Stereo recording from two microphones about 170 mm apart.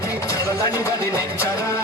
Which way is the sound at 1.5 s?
20° left (ahead or behind).